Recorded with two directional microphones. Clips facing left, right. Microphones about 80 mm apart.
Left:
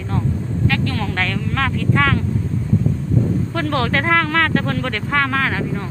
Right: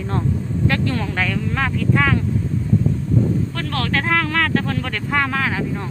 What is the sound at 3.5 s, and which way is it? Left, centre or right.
Speech, centre.